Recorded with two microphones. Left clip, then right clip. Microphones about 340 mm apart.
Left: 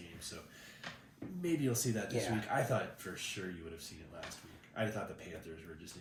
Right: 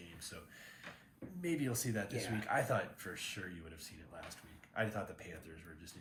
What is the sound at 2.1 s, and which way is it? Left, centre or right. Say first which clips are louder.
Speech: left 5 dB; centre.